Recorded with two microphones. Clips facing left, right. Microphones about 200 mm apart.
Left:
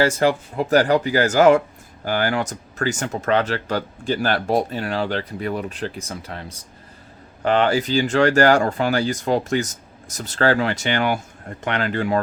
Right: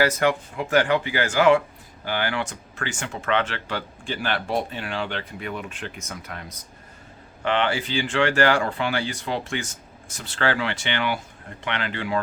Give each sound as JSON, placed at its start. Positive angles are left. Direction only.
{"t": 0.0, "sound": "speech", "side_deg": 30}
{"t": 7.4, "sound": "speech", "side_deg": 40}